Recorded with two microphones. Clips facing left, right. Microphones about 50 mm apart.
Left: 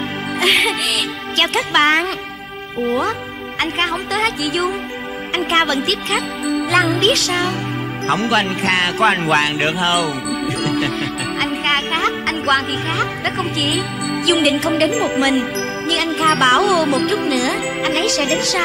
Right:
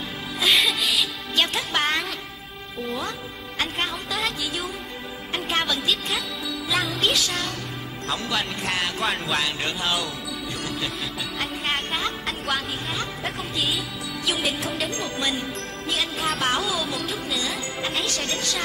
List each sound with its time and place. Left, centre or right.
0.4 s music: left
3.7 s music: left
5.3 s music: left
6.4 s music: left
8.1 s speech: left